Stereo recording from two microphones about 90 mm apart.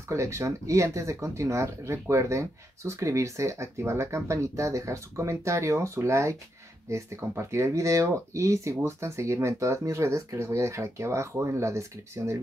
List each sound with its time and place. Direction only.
0.1 s speech: 35° right (ahead or behind)